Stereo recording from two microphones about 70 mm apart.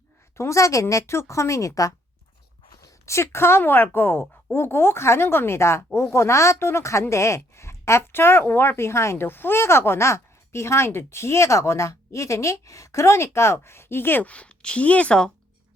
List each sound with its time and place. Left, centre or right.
0.3 s a woman's voice: left
14.3 s speech: centre